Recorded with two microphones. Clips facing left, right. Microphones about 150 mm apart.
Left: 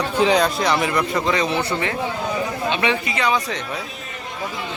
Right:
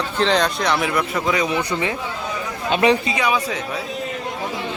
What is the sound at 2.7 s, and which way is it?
Speech, 40° right (ahead or behind).